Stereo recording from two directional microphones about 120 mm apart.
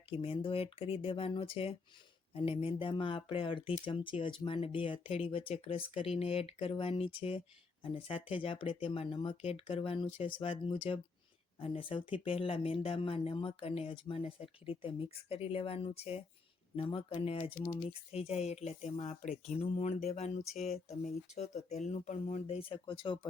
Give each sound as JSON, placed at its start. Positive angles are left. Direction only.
{"t": 0.1, "sound": "speech", "side_deg": 50}
{"t": 17.8, "sound": "speech", "side_deg": 55}
{"t": 19.5, "sound": "a sound", "side_deg": 65}
{"t": 20.7, "sound": "speech", "side_deg": 70}
{"t": 22.7, "sound": "speech", "side_deg": 45}